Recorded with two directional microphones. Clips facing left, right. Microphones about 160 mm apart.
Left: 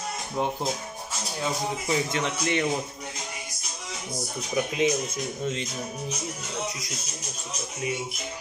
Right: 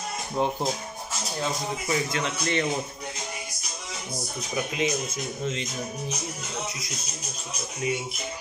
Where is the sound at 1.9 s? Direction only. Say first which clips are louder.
Even; 20° left (ahead or behind).